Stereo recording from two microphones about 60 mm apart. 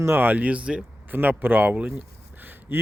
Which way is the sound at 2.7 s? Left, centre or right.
Right.